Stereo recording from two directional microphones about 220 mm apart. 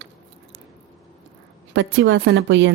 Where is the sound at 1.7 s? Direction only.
60° right (ahead or behind).